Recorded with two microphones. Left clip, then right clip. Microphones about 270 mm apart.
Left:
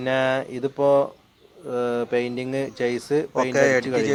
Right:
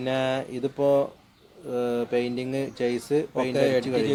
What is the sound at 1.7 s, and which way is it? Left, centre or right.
Speech, centre.